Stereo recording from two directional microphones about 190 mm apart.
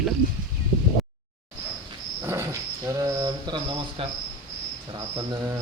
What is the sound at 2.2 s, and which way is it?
Cricket, 15° right (ahead or behind).